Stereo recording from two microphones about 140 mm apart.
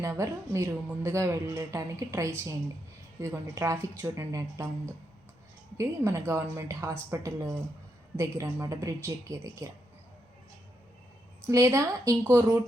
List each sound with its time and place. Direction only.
0.0 s a woman's voice: 20° right (ahead or behind)
5.7 s a woman's voice: 20° right (ahead or behind)
11.4 s a woman's voice: 20° right (ahead or behind)